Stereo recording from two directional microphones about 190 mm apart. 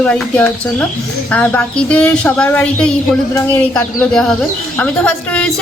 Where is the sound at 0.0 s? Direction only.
5° left (ahead or behind).